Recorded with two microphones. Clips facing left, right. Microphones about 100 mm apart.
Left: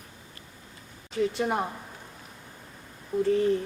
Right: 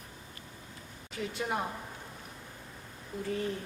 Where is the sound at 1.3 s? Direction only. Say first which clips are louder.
Left 6 dB; 65° left (ahead or behind).